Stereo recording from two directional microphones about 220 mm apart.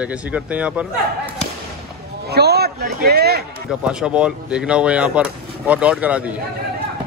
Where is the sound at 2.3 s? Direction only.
45° right (ahead or behind).